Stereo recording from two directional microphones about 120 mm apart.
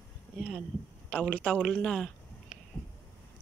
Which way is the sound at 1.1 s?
10° left (ahead or behind).